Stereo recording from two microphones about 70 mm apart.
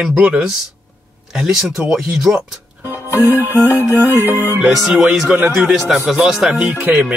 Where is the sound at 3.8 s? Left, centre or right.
Right.